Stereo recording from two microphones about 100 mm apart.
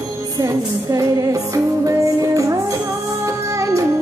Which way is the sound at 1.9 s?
35° right (ahead or behind).